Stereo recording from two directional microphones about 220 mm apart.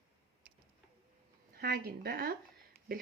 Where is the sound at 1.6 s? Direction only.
45° right (ahead or behind).